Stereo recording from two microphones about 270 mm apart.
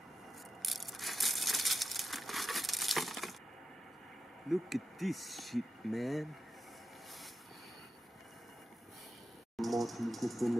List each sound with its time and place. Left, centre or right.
0.6 s crushing: centre
4.5 s speech: centre
9.6 s a sound: centre